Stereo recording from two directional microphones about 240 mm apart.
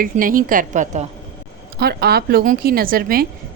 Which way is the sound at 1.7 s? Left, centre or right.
Right.